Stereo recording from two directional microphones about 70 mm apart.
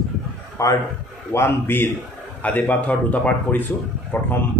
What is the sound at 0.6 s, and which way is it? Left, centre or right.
Speech, left.